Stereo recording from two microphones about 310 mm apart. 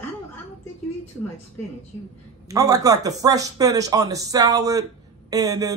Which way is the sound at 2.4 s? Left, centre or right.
Centre.